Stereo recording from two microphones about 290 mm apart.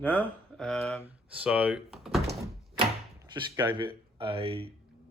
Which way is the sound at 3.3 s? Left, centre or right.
Centre.